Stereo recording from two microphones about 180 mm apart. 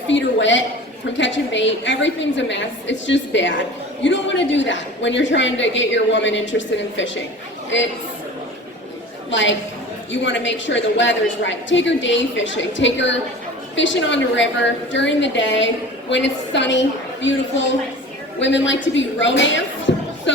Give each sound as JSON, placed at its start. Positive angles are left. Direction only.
{"t": 0.1, "sound": "a woman's voice", "side_deg": 90}
{"t": 9.3, "sound": "a woman's voice", "side_deg": 90}
{"t": 18.3, "sound": "a woman's voice", "side_deg": 85}